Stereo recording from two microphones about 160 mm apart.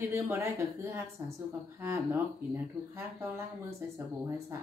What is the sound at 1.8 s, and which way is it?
Speech, 15° right (ahead or behind).